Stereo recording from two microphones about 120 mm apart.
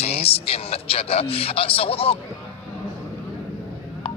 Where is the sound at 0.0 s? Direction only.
55° left (ahead or behind).